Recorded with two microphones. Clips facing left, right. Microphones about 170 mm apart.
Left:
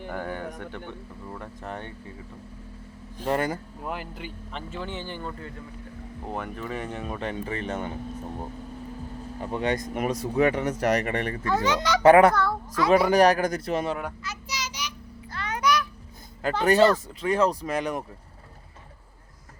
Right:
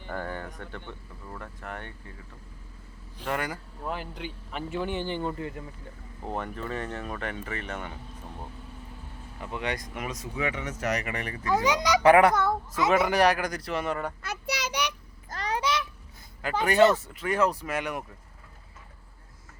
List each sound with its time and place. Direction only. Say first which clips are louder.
0.1 s speech: left 1 dB; 10° left (ahead or behind)
1.6 s speech: left 3 dB; 20° left (ahead or behind)
3.2 s speech: left 5 dB; 40° left (ahead or behind)
3.8 s speech: even; 5° left (ahead or behind)
4.7 s speech: right 5 dB; 15° right (ahead or behind)
6.2 s speech: even; 5° left (ahead or behind); by 7.9 s 30° left (ahead or behind)
9.4 s speech: left 6 dB; 35° left (ahead or behind)
10.8 s speech: left 5 dB; 55° left (ahead or behind)
11.1 s speech: left 6 dB; 35° left (ahead or behind)
11.4 s a child's voice: right 1 dB; 10° right (ahead or behind)
13.1 s speech: left 4 dB; 40° left (ahead or behind)
14.2 s child singing: right 3 dB; 60° right (ahead or behind)
15.3 s honk: left 3 dB; 35° right (ahead or behind)
17.2 s speech: left 3 dB; 30° left (ahead or behind)